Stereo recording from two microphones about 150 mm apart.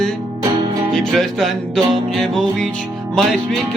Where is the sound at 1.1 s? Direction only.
Centre (ahead or behind).